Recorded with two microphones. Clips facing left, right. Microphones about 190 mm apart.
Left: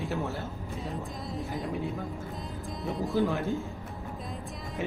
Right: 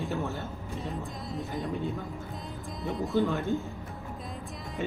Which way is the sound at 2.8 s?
Centre (ahead or behind).